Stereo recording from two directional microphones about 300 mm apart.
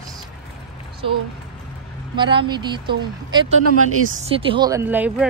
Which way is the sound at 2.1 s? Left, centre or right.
Centre.